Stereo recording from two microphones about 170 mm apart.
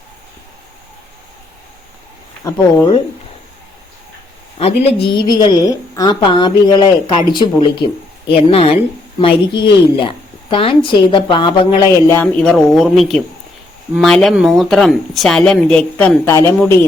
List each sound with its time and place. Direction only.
2.4 s a woman's voice: 20° left (ahead or behind)
4.6 s a woman's voice: 35° left (ahead or behind)
11.9 s speech: 15° left (ahead or behind)